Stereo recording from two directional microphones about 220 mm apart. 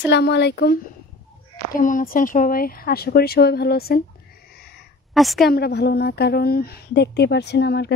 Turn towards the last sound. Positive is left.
turn(degrees=50)  # may be behind; listen again after turning